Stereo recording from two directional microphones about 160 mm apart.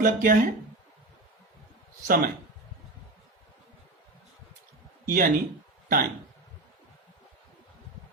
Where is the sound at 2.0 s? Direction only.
65° right (ahead or behind).